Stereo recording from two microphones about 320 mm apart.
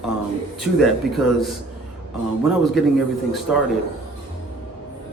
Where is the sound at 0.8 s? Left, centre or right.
Centre.